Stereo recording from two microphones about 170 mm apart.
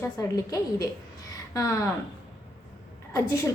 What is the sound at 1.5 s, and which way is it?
Speech, 20° left (ahead or behind).